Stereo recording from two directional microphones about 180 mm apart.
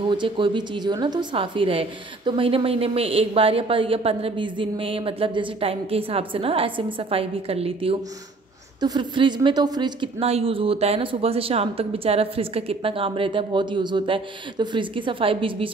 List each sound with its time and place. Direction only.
0.1 s a woman's voice: 25° right (ahead or behind)